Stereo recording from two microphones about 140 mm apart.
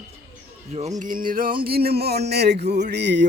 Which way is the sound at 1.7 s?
90° right.